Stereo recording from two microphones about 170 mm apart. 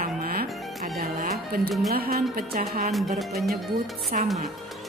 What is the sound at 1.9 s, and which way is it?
Speech, 65° right (ahead or behind).